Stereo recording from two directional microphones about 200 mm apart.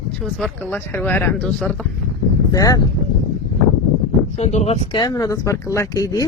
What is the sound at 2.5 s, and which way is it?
Speech, 15° left (ahead or behind).